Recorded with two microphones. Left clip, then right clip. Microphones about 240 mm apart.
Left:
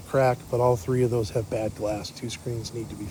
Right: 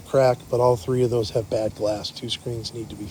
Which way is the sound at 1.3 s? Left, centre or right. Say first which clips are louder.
Right 4 dB; right.